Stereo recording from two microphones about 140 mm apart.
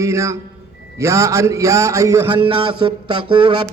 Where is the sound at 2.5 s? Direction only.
35° right (ahead or behind).